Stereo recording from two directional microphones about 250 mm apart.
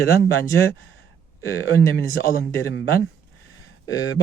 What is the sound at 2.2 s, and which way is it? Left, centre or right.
Speech, left.